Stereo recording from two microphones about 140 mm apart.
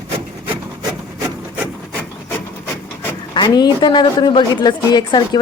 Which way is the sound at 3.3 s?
30° left (ahead or behind).